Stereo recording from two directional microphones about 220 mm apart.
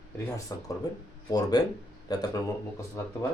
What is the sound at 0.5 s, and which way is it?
Speech, 15° left (ahead or behind).